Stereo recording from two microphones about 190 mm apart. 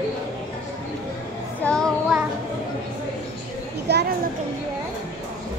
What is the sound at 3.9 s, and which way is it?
Children playing, 60° right (ahead or behind).